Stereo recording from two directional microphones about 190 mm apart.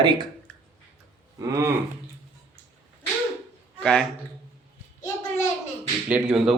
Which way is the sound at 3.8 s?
5° left (ahead or behind).